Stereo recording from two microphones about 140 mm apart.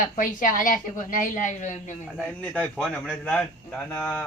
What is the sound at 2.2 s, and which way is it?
A man's voice, 10° left (ahead or behind).